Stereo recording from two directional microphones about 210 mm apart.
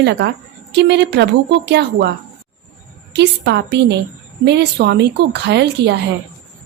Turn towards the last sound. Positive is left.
turn(degrees=-55)  # may be behind; listen again after turning